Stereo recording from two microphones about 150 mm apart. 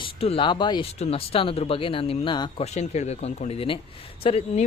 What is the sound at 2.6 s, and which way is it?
Speech, 50° left (ahead or behind).